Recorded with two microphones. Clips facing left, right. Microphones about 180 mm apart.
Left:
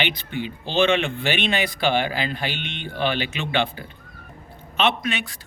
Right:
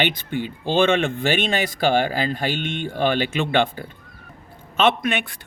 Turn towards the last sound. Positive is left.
turn(degrees=-55)  # may be behind; listen again after turning